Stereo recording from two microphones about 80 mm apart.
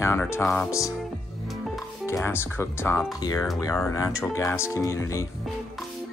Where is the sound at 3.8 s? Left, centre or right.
Left.